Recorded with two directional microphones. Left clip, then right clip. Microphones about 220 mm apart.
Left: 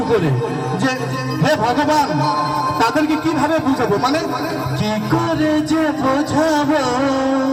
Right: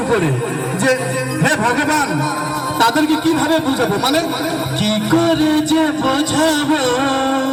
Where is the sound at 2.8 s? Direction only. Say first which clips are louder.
Right 5 dB; 30° left (ahead or behind).